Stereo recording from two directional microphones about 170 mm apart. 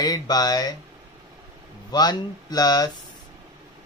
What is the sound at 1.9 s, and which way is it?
Speech, 25° left (ahead or behind).